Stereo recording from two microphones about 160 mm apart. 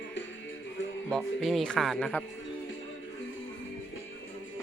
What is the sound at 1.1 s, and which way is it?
Speech, centre (ahead or behind).